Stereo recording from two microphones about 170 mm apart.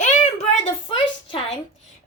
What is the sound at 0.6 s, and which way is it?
Speech, 35° left (ahead or behind).